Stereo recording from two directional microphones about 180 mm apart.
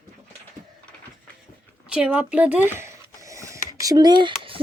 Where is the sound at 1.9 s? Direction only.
5° right (ahead or behind); by 4.6 s 30° right (ahead or behind).